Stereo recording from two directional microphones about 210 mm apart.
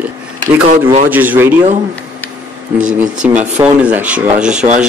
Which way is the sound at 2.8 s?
35° right (ahead or behind).